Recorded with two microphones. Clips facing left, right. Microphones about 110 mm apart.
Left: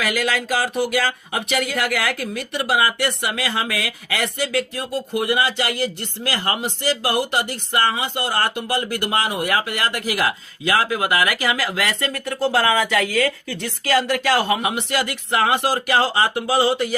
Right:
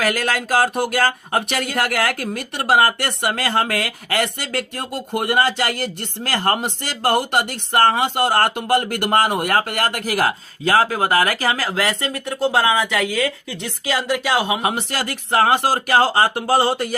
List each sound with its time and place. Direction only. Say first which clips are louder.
0.6 s speech: right 2 dB; 50° right (ahead or behind); by 14.6 s 15° right (ahead or behind)
14.6 s speech: even; 40° right (ahead or behind)